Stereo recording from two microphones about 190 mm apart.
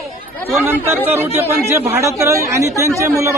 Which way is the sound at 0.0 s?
Centre (ahead or behind).